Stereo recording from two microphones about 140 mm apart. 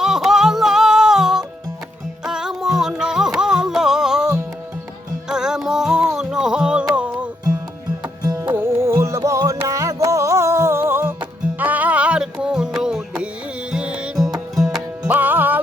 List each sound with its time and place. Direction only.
0.0 s music: 5° right (ahead or behind)
8.0 s music: 30° right (ahead or behind)
8.5 s music: 20° right (ahead or behind)